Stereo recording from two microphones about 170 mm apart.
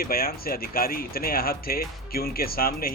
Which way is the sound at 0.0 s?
60° left (ahead or behind).